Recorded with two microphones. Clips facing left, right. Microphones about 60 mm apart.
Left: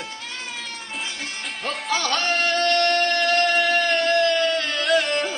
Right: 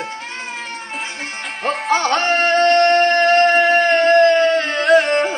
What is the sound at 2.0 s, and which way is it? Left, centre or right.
Music, right.